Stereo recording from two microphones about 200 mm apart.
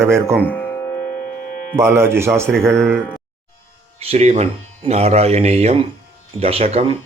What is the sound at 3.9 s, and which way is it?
Speech, 30° right (ahead or behind).